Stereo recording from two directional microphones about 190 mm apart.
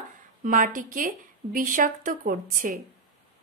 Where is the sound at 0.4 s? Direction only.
45° right (ahead or behind).